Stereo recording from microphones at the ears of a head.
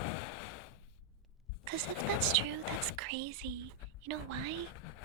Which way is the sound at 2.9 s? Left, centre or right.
Right.